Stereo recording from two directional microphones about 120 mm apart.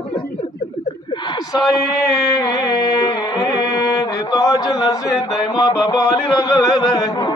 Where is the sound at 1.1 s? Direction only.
35° left (ahead or behind).